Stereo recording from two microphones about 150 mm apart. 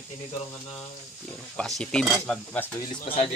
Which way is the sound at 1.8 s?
5° left (ahead or behind).